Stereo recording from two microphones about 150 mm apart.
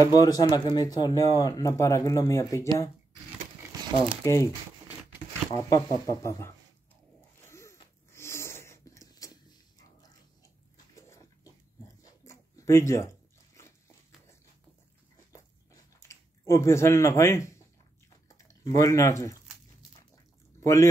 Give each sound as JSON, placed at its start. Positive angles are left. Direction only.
{"t": 0.0, "sound": "speech", "side_deg": 25}
{"t": 3.7, "sound": "crumpling", "side_deg": -25}
{"t": 4.2, "sound": "speech", "side_deg": 20}
{"t": 5.6, "sound": "speech", "side_deg": 20}
{"t": 7.4, "sound": "a sound", "side_deg": 20}
{"t": 15.3, "sound": "chewing", "side_deg": 20}
{"t": 18.5, "sound": "speech", "side_deg": 20}